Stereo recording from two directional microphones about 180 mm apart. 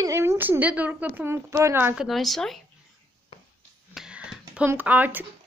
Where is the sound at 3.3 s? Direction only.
30° left (ahead or behind).